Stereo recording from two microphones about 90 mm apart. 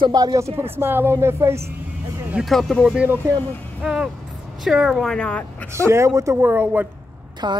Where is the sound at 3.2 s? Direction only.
30° right (ahead or behind).